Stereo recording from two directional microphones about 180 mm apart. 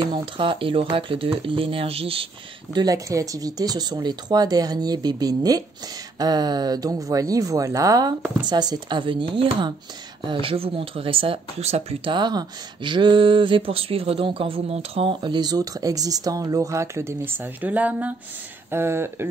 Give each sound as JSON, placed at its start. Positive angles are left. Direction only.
{"t": 0.1, "sound": "speech", "side_deg": -30}
{"t": 2.7, "sound": "speech", "side_deg": -20}